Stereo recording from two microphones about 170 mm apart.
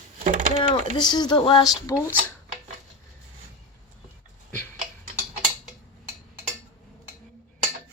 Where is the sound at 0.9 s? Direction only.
25° left (ahead or behind).